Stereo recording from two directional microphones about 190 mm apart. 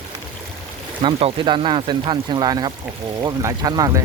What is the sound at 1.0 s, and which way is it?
Speech, 25° right (ahead or behind).